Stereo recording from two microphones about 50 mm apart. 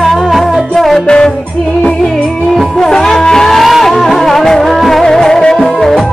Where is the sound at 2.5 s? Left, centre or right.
Centre.